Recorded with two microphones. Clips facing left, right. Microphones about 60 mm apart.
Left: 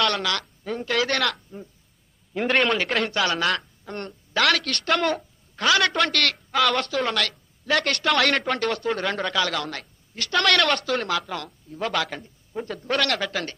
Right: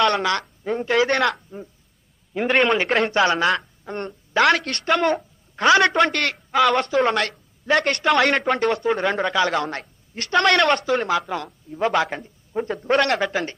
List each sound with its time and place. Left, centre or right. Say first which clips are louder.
0.0 s speech: right 5 dB; right
1.0 s speech: right 5 dB; centre
3.1 s a woman's voice: right 5 dB; right; by 5.2 s centre
5.6 s speech: right 5 dB; right
5.9 s speech: right 4 dB; centre
7.0 s a woman's voice: right 5 dB; right
7.8 s speech: right 3 dB; centre
9.3 s speech: right 5 dB; right
10.4 s speech: right 3 dB; centre